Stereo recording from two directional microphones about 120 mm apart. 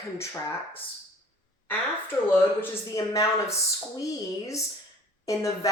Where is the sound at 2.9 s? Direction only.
25° left (ahead or behind).